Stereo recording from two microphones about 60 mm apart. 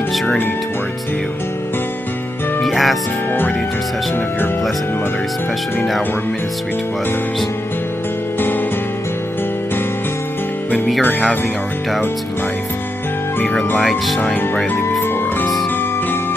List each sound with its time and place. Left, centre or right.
2.6 s music: centre
8.4 s music: left
13.7 s speech: centre